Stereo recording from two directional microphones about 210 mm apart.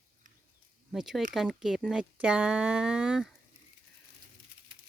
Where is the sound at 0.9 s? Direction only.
Centre (ahead or behind).